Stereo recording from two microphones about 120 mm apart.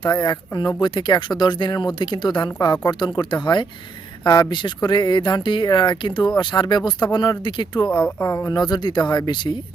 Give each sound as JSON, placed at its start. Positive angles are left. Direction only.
{"t": 0.0, "sound": "speech", "side_deg": 35}
{"t": 8.2, "sound": "speech", "side_deg": 20}
{"t": 8.4, "sound": "speech", "side_deg": 35}